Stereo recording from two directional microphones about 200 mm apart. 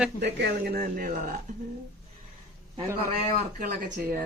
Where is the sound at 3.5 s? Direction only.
45° right (ahead or behind).